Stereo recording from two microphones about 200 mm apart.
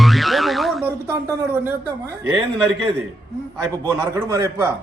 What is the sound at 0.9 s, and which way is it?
Speech, 10° right (ahead or behind).